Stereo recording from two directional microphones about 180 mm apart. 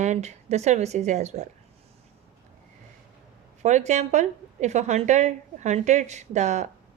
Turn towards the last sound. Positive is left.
turn(degrees=-40)  # may be behind; listen again after turning